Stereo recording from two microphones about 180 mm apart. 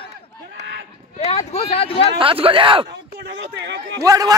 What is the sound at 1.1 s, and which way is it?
Speech, 35° left (ahead or behind).